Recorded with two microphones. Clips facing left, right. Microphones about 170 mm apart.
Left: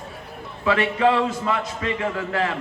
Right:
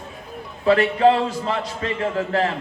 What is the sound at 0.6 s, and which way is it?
A man's voice, 35° right (ahead or behind).